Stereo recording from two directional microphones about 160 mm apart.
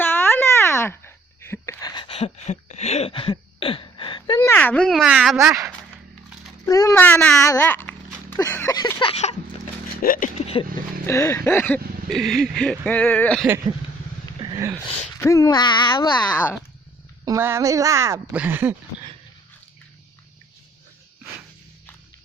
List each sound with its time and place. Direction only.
0.0 s wail: 15° left (ahead or behind); by 4.4 s 30° left (ahead or behind)
4.4 s speech: 15° left (ahead or behind)
6.7 s speech: 20° left (ahead or behind)
8.4 s a sound: 15° left (ahead or behind)
9.0 s vehicle: 40° left (ahead or behind)
10.0 s speech: 60° left (ahead or behind)
10.4 s vehicle: 35° left (ahead or behind)
11.0 s speech: 15° left (ahead or behind)
14.5 s speech: 20° right (ahead or behind)
15.2 s speech: 20° left (ahead or behind)
17.2 s speech: 15° right (ahead or behind)